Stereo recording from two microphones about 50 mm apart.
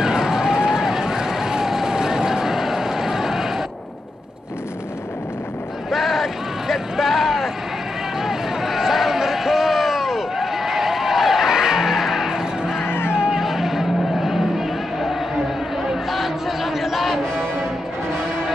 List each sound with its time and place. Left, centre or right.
0.0 s run: centre
5.9 s a sound: centre
12.8 s music: left
13.1 s music: centre
13.4 s a sound: centre
15.8 s chatter: centre